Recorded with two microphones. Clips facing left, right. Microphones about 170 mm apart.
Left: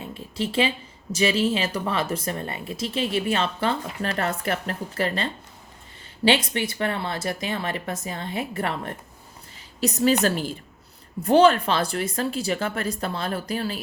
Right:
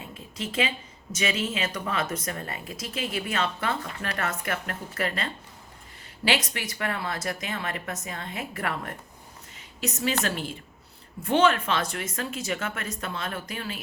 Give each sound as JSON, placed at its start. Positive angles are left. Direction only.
{"t": 0.0, "sound": "speech", "side_deg": 30}
{"t": 11.2, "sound": "speech", "side_deg": 35}